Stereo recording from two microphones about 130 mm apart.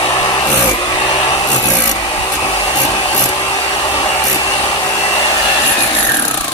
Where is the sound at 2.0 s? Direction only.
45° left (ahead or behind).